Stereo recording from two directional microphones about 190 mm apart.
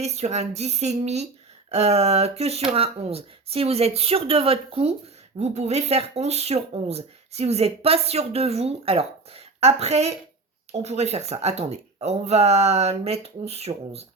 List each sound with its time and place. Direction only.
0.0 s speech: 35° right (ahead or behind)